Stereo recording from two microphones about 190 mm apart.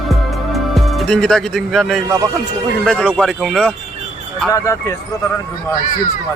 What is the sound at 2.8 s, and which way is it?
Speech, 5° left (ahead or behind).